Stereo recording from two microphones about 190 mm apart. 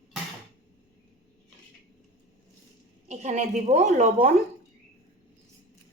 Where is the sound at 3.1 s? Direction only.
35° right (ahead or behind).